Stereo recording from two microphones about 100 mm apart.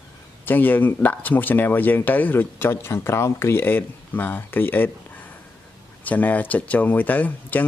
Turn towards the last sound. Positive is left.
turn(degrees=15)  # may be behind; listen again after turning